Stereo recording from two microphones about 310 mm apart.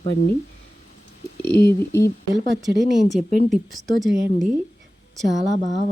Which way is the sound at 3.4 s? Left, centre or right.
Centre.